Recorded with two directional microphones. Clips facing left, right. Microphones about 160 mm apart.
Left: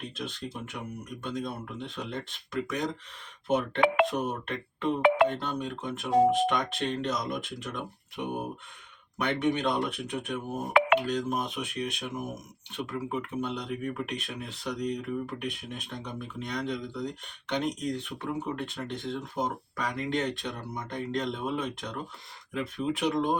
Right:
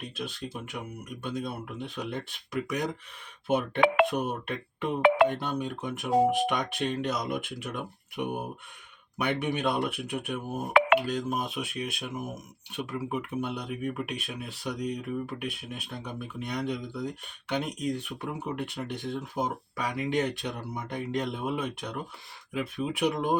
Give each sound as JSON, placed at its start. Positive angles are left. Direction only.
{"t": 0.2, "sound": "speech", "side_deg": -5}
{"t": 4.2, "sound": "speech", "side_deg": -10}
{"t": 5.0, "sound": "speech", "side_deg": -85}
{"t": 5.3, "sound": "speech", "side_deg": -10}